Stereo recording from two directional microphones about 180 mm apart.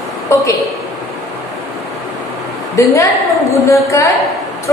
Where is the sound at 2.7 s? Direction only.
15° left (ahead or behind).